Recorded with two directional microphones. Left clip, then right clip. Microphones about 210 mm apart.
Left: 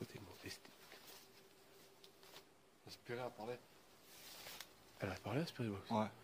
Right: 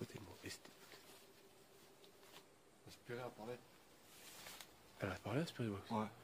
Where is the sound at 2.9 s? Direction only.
25° left (ahead or behind).